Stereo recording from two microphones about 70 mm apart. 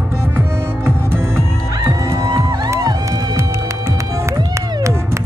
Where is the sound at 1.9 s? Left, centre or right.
Right.